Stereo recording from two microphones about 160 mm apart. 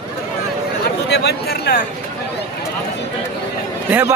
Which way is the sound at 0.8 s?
90° left.